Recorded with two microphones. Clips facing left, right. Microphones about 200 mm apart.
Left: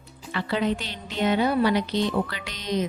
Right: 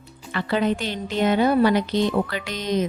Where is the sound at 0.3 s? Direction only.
50° right (ahead or behind).